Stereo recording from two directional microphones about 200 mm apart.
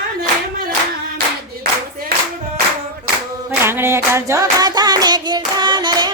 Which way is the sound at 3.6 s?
10° right (ahead or behind).